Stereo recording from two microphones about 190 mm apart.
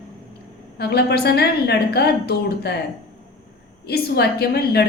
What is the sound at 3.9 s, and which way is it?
Speech, 60° left (ahead or behind).